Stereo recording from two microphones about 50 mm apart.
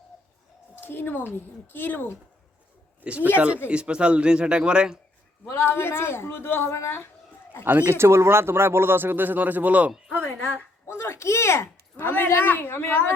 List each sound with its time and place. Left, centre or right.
0.8 s a woman's voice: left
3.0 s speech: right
5.5 s a woman's voice: left
6.6 s speech: left
7.6 s speech: right
7.9 s speech: right
10.1 s a woman's voice: left
10.8 s a woman's voice: left